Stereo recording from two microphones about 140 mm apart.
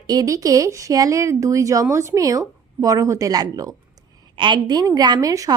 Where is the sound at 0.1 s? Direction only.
25° right (ahead or behind).